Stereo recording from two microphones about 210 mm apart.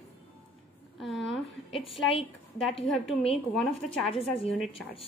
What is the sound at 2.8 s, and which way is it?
A woman's voice, 30° left (ahead or behind).